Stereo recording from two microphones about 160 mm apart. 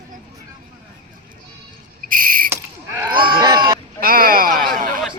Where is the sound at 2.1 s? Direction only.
60° right (ahead or behind).